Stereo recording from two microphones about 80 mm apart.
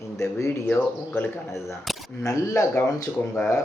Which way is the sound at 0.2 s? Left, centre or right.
Left.